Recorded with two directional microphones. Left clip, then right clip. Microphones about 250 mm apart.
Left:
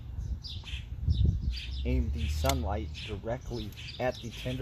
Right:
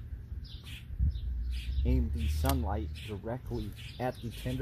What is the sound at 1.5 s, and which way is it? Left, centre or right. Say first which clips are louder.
Bird: right 1 dB; right.